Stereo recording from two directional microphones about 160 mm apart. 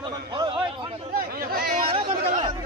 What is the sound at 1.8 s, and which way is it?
Speech, 35° right (ahead or behind).